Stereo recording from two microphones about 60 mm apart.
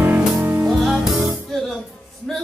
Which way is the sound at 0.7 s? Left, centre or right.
Centre.